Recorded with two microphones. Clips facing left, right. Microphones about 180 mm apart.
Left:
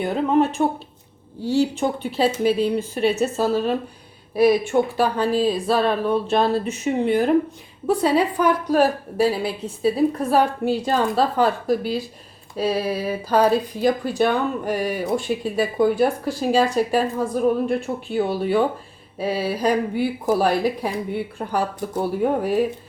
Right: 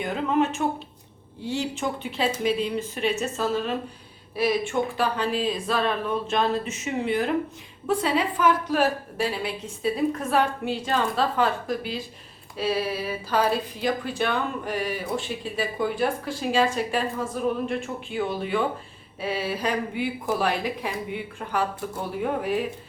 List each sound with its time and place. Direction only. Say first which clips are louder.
0.0 s a woman's voice: left 5 dB; 35° left (ahead or behind)
1.8 s a woman's voice: left 6 dB; 30° left (ahead or behind)